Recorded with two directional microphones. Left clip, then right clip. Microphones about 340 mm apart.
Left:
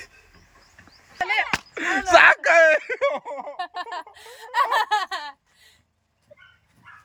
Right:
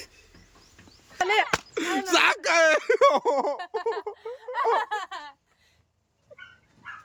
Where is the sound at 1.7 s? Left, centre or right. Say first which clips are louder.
Left 8 dB; centre.